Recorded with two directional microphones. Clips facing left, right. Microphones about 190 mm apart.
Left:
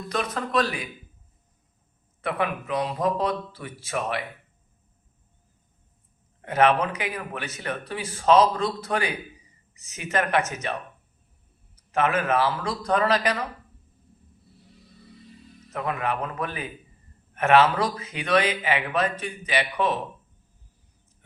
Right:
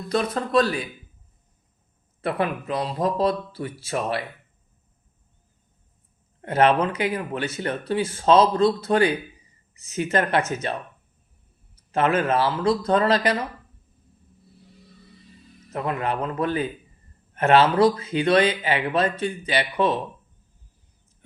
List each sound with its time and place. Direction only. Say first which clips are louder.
0.1 s speech: right 5 dB; 30° right (ahead or behind)
2.2 s speech: right 2 dB; 35° right (ahead or behind)
6.4 s speech: right 2 dB; 30° right (ahead or behind)
10.2 s speech: right 1 dB; 30° right (ahead or behind)
15.7 s speech: right 2 dB; 30° right (ahead or behind)